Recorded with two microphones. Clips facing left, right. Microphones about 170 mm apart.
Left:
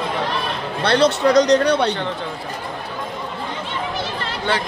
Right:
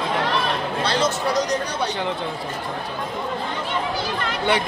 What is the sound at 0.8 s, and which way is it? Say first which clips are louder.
Speech: left 8 dB; 65° left (ahead or behind).